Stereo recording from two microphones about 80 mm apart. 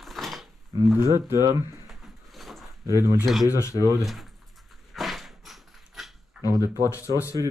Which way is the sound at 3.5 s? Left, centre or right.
Left.